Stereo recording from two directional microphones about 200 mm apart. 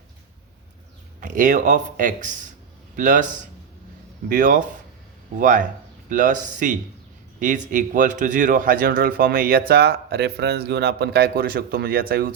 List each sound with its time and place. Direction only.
1.2 s a man's voice: 40° right (ahead or behind)
4.3 s a man's voice: 40° right (ahead or behind)